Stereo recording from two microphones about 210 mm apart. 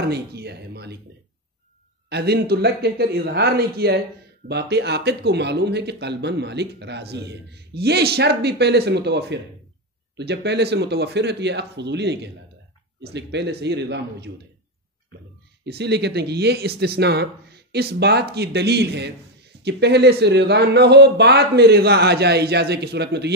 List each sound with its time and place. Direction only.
0.1 s speech: 50° right (ahead or behind)
2.0 s speech: 50° right (ahead or behind)
15.6 s speech: 55° right (ahead or behind)